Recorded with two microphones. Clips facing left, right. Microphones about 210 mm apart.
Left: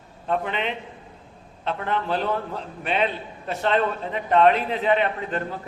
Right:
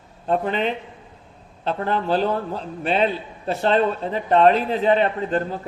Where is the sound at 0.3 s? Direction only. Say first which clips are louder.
Right 4 dB; 35° right (ahead or behind).